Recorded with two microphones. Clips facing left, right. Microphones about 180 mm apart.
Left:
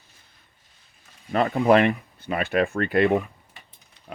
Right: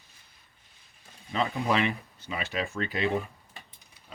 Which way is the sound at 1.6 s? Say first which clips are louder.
Left 12 dB; 55° left (ahead or behind).